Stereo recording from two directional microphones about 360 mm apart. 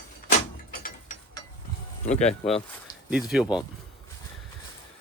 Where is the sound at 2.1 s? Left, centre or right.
Centre.